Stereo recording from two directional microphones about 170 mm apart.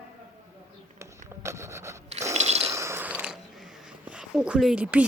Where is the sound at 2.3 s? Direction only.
40° right (ahead or behind).